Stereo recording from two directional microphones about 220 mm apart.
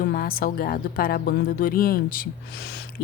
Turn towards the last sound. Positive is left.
turn(degrees=45)  # may be behind; listen again after turning